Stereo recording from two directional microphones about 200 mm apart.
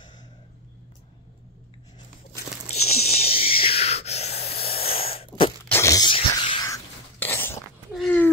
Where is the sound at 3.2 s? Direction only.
30° left (ahead or behind).